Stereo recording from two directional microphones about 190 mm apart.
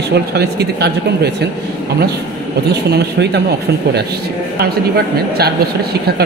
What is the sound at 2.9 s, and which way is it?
Speech, 60° right (ahead or behind).